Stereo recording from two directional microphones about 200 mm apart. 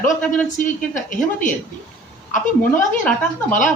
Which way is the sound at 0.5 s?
40° left (ahead or behind).